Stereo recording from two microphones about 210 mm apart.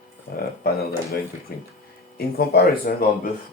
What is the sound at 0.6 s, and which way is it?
Speech, 45° left (ahead or behind).